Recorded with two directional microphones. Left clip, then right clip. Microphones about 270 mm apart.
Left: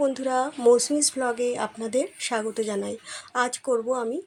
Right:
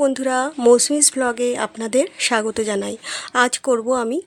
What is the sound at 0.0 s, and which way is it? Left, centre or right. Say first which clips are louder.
Speech: right 5 dB; right.